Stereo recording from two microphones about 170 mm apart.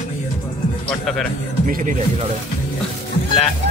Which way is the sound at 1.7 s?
50° right (ahead or behind).